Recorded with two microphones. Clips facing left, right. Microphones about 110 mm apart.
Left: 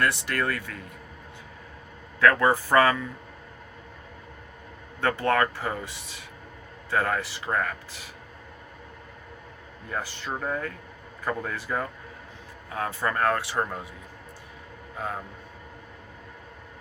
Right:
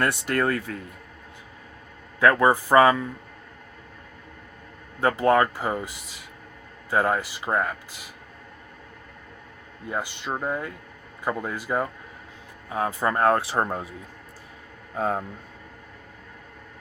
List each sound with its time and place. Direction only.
0.0 s speech: 25° right (ahead or behind)
2.2 s speech: 20° right (ahead or behind)
4.9 s speech: 20° right (ahead or behind)
9.9 s speech: 20° right (ahead or behind)
14.9 s speech: 35° right (ahead or behind)